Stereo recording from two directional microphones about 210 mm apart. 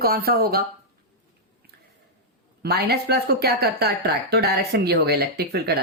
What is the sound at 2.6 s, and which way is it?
Speech, 50° right (ahead or behind).